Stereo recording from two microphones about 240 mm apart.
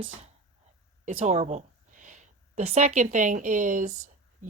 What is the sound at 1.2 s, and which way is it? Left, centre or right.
A woman's voice, right.